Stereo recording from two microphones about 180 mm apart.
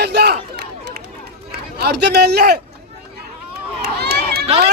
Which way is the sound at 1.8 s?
65° right (ahead or behind).